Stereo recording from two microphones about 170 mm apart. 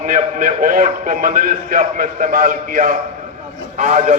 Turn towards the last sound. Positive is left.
turn(degrees=-45)  # may be behind; listen again after turning